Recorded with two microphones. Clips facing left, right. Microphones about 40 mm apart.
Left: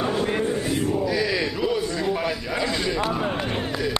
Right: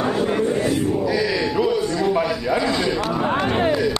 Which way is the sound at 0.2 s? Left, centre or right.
Centre.